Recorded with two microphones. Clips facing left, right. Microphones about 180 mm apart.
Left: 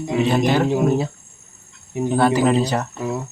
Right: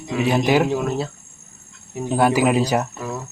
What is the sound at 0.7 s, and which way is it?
Speech, 15° left (ahead or behind).